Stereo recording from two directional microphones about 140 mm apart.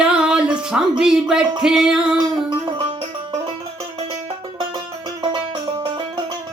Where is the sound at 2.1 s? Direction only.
30° right (ahead or behind).